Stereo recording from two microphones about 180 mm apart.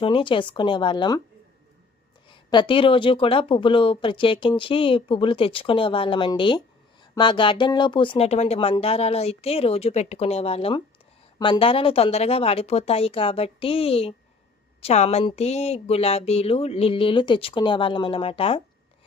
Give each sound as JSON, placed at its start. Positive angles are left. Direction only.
{"t": 0.0, "sound": "speech", "side_deg": 30}
{"t": 2.3, "sound": "speech", "side_deg": 25}